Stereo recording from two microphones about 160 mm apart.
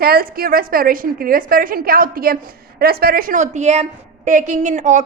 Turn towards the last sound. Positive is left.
turn(degrees=-50)  # may be behind; listen again after turning